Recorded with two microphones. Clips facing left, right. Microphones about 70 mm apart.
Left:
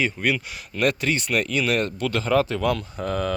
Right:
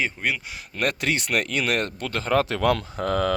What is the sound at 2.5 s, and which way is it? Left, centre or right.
Speech, right.